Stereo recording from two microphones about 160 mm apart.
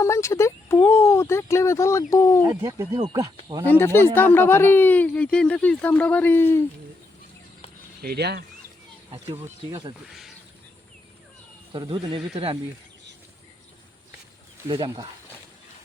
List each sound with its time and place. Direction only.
0.0 s speech: 20° left (ahead or behind)
2.5 s speech: 20° right (ahead or behind)
3.7 s speech: 15° left (ahead or behind)
8.0 s speech: 90° right
9.1 s speech: 35° right (ahead or behind)
10.1 s speech: centre (ahead or behind)
11.7 s speech: 30° right (ahead or behind)